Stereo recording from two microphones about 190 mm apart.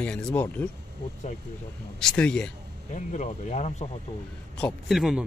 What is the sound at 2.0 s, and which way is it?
Speech, 5° left (ahead or behind).